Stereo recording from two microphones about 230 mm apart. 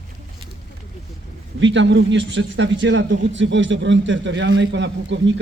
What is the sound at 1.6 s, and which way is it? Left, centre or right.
A man's voice, right.